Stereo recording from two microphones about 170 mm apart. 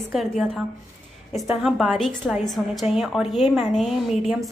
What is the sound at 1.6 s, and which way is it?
A woman's voice, centre (ahead or behind).